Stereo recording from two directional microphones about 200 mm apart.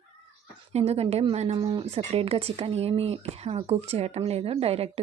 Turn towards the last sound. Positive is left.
turn(degrees=-30)  # may be behind; listen again after turning